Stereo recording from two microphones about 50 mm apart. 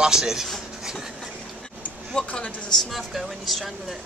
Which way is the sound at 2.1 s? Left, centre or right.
Centre.